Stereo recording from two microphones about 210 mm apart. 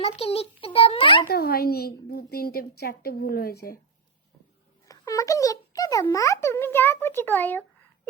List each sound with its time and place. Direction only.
0.0 s a child's voice: 30° left (ahead or behind)
1.3 s a woman's voice: 45° left (ahead or behind)
4.9 s a child's voice: 15° left (ahead or behind)